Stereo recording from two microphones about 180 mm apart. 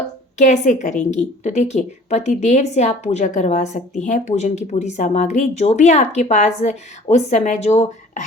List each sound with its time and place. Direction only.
0.3 s speech: 40° left (ahead or behind)